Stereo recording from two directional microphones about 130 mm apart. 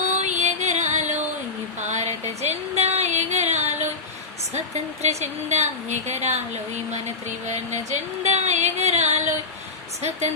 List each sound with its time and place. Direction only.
0.1 s music: 65° right (ahead or behind)
1.8 s a sound: 60° right (ahead or behind)
4.5 s music: 60° right (ahead or behind)